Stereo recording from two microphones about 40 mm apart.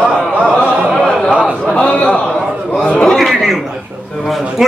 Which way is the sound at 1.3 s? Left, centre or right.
Right.